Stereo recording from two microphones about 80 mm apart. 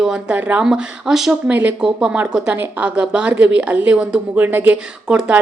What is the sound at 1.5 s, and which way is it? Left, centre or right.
A woman's voice, centre.